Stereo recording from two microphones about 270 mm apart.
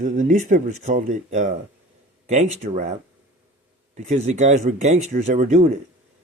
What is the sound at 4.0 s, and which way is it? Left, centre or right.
A man's voice, right.